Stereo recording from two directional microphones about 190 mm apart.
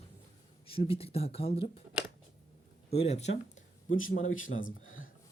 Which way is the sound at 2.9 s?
35° left (ahead or behind).